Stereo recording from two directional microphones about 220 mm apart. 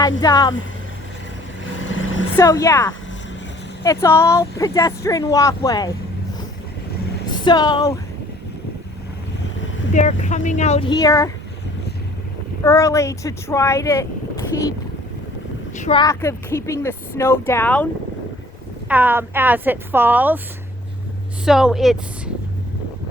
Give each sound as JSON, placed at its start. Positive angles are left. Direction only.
{"t": 0.0, "sound": "speech", "side_deg": 15}
{"t": 1.9, "sound": "vehicle", "side_deg": 60}
{"t": 2.3, "sound": "speech", "side_deg": 15}
{"t": 7.3, "sound": "speech", "side_deg": 20}
{"t": 9.9, "sound": "speech", "side_deg": 35}
{"t": 12.6, "sound": "speech", "side_deg": 15}
{"t": 15.8, "sound": "speech", "side_deg": 20}
{"t": 18.9, "sound": "a woman's voice", "side_deg": -10}
{"t": 21.4, "sound": "speech", "side_deg": 0}